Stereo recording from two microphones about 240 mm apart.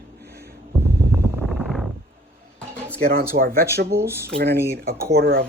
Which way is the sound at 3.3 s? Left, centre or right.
Right.